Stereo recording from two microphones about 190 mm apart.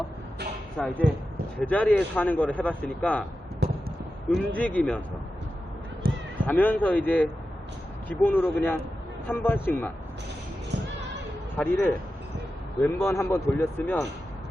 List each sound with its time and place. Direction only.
0.8 s speech: 5° left (ahead or behind)
3.6 s a sound: 60° right (ahead or behind)
4.3 s speech: 5° left (ahead or behind)
6.0 s cat: 50° right (ahead or behind)
6.4 s speech: 10° left (ahead or behind)
11.5 s speech: 10° left (ahead or behind)